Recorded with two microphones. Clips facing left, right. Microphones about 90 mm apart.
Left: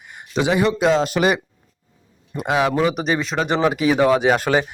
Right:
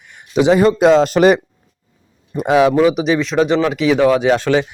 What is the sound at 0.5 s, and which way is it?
Speech, 40° right (ahead or behind).